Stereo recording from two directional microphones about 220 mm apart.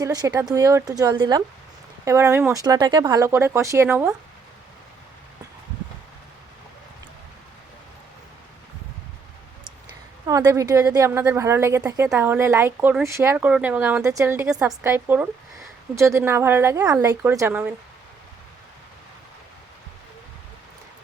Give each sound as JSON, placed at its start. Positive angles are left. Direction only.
{"t": 0.0, "sound": "a woman's voice", "side_deg": -15}
{"t": 10.2, "sound": "a woman's voice", "side_deg": -15}